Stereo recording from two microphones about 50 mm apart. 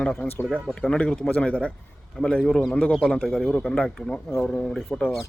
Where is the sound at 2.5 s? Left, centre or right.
Centre.